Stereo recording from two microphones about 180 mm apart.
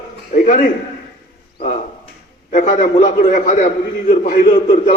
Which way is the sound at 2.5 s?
45° left (ahead or behind).